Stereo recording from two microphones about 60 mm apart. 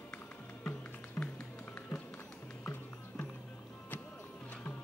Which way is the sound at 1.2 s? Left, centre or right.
Centre.